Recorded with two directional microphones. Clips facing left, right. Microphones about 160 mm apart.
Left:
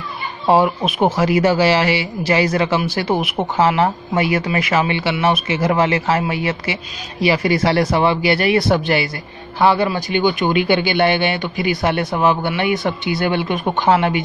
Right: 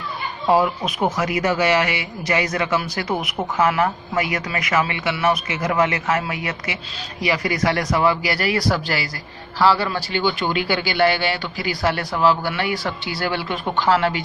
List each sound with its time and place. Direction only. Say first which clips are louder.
0.5 s speech: left 3 dB; 25° left (ahead or behind)